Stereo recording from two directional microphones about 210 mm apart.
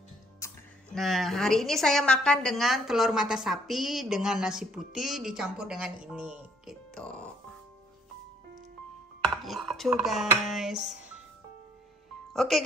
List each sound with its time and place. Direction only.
0.4 s music: 15° left (ahead or behind)
0.9 s a woman's voice: centre (ahead or behind)
9.2 s dishes: centre (ahead or behind)
9.8 s a woman's voice: 5° right (ahead or behind)
12.3 s speech: centre (ahead or behind)